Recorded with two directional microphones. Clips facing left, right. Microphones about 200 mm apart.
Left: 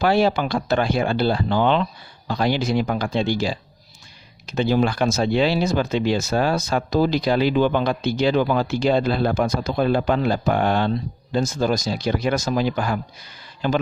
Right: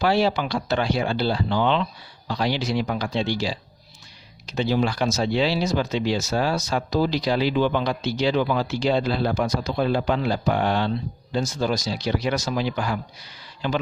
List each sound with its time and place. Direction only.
0.0 s speech: 50° left (ahead or behind)